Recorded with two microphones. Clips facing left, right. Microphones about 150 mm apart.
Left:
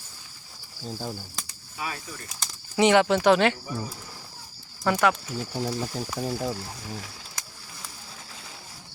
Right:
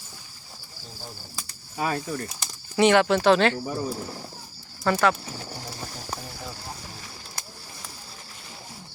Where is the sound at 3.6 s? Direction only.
50° right (ahead or behind).